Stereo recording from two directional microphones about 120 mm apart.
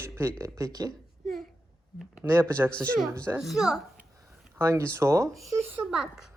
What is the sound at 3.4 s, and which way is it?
Speech, 5° right (ahead or behind).